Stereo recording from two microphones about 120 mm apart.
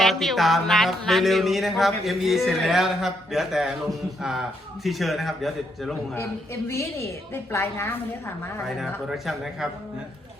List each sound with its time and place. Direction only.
0.0 s music: centre (ahead or behind)
6.1 s a man's voice: 20° left (ahead or behind)
9.0 s music: centre (ahead or behind)